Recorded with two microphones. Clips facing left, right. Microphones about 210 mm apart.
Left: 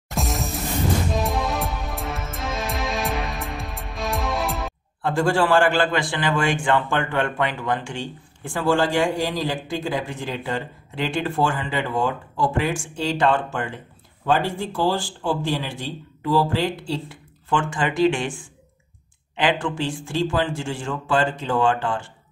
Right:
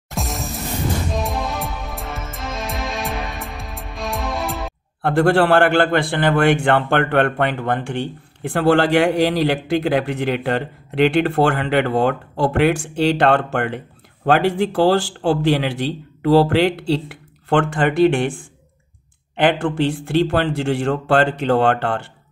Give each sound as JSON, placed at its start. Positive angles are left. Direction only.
{"t": 0.1, "sound": "music", "side_deg": 0}
{"t": 5.0, "sound": "a man's voice", "side_deg": -60}